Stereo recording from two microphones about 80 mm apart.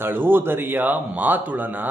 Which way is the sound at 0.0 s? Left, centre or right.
Right.